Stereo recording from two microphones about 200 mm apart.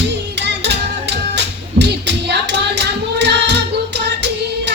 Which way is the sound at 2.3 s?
60° right (ahead or behind).